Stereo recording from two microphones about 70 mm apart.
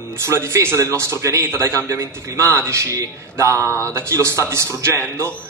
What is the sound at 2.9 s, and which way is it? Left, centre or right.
Speech, right.